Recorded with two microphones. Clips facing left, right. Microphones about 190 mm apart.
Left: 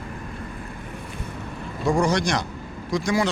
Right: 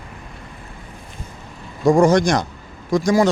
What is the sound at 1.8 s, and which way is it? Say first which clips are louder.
Speech: right 8 dB; 45° right (ahead or behind).